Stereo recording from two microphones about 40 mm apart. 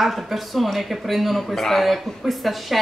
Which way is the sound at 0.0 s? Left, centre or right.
Centre.